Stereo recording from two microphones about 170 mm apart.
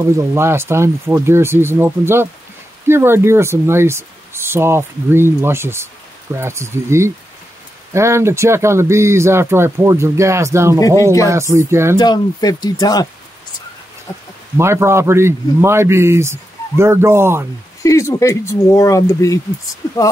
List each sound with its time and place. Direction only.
0.0 s speech: 15° right (ahead or behind)
12.0 s speech: 25° left (ahead or behind)
14.6 s speech: 15° right (ahead or behind)
17.8 s speech: 15° left (ahead or behind)